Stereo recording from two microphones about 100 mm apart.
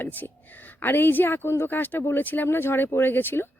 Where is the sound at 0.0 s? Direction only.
20° left (ahead or behind).